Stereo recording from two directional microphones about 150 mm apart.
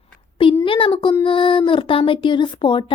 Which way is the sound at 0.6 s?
35° left (ahead or behind).